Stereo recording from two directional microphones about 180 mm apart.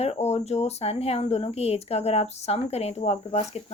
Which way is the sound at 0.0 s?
35° left (ahead or behind).